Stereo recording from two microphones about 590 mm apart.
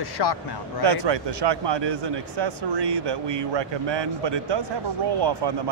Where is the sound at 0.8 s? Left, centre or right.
Right.